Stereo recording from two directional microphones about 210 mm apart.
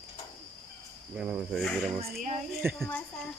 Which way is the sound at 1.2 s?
Centre (ahead or behind).